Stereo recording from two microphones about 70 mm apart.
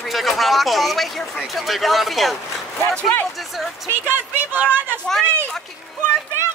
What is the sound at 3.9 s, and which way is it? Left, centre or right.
Speech, right.